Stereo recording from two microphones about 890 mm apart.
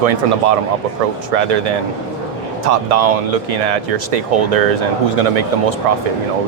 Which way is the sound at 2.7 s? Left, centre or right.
Right.